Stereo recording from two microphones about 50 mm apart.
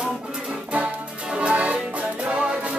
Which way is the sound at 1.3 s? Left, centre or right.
Right.